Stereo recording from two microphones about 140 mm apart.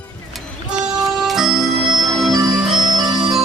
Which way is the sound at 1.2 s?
Centre (ahead or behind).